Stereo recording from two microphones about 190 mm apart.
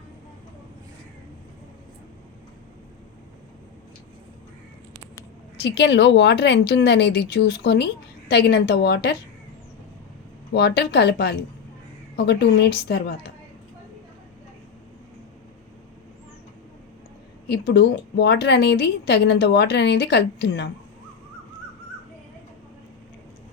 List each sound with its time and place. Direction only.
5.6 s a woman's voice: 65° left (ahead or behind)
10.5 s a woman's voice: 60° left (ahead or behind)
17.5 s a woman's voice: 60° left (ahead or behind)